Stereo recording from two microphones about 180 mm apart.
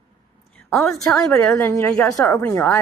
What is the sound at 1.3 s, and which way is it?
Speech, 15° left (ahead or behind).